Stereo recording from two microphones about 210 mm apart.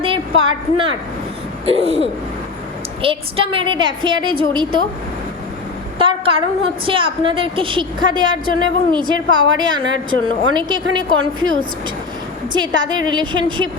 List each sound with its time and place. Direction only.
0.0 s a sound: 25° right (ahead or behind)
1.6 s a woman's voice: 30° right (ahead or behind)
3.0 s a woman's voice: 25° right (ahead or behind)
6.0 s a sound: 25° right (ahead or behind)
6.8 s a woman's voice: 25° right (ahead or behind)
12.5 s a woman's voice: 20° right (ahead or behind)